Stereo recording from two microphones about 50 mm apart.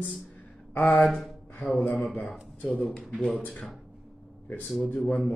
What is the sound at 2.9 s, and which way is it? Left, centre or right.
Speech, centre.